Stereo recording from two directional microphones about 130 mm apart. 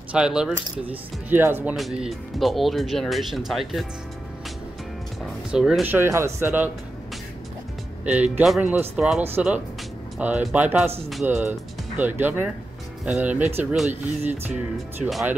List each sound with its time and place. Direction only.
0.1 s speech: 5° right (ahead or behind)
1.8 s speech: centre (ahead or behind)
5.5 s speech: 5° right (ahead or behind)
5.9 s speech: 20° right (ahead or behind)
8.0 s speech: 10° right (ahead or behind)